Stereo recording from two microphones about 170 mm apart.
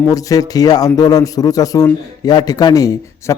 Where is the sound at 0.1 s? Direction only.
20° left (ahead or behind).